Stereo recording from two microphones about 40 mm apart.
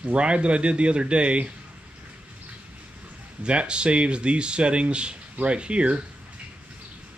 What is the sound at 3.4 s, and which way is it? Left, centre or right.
Speech, right.